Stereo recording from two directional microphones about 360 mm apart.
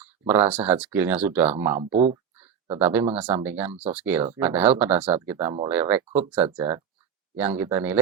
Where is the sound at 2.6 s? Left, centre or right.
Centre.